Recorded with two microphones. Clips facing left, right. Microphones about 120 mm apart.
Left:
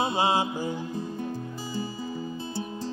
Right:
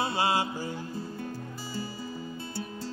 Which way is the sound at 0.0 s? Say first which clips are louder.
Left 3 dB; 20° left (ahead or behind).